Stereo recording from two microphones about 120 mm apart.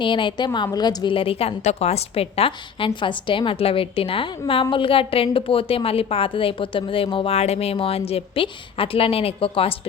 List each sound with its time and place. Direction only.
0.0 s a woman's voice: 45° left (ahead or behind)
7.3 s a woman's voice: 60° left (ahead or behind)